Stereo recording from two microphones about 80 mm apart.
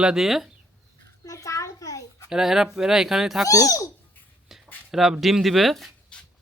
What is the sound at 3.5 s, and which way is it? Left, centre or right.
Speech, left.